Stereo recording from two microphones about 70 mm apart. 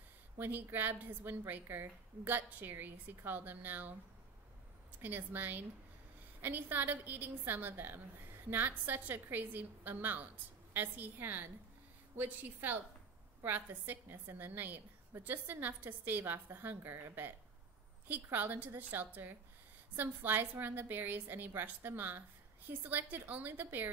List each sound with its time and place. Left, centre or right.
0.4 s a woman's voice: right
5.0 s a woman's voice: right